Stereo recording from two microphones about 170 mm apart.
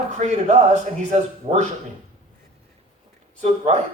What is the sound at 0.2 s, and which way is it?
A man's voice, 40° right (ahead or behind).